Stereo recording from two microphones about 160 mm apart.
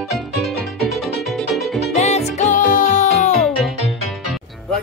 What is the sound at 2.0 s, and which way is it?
Music, 45° left (ahead or behind).